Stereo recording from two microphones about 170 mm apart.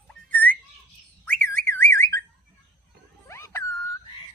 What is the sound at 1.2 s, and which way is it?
Car alarm, 10° left (ahead or behind).